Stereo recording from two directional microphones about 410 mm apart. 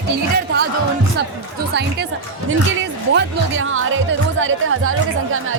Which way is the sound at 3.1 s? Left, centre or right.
Right.